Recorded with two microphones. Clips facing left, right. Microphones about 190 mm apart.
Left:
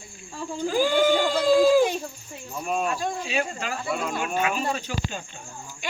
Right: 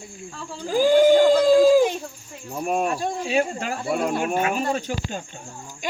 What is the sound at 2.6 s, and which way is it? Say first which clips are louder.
Speech: right 3 dB; 45° right (ahead or behind).